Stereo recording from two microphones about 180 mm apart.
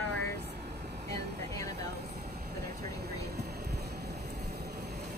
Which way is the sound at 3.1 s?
60° right (ahead or behind).